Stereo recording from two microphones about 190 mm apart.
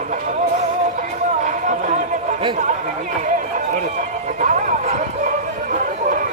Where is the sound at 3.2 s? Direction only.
45° right (ahead or behind).